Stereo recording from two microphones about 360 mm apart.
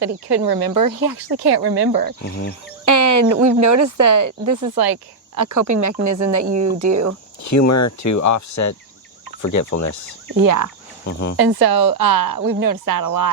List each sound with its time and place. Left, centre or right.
0.3 s speech: right
2.2 s speech: left
2.8 s speech: right
4.7 s speech: right
6.4 s speech: right
6.9 s speech: right
7.7 s speech: left
10.4 s speech: right
11.3 s speech: right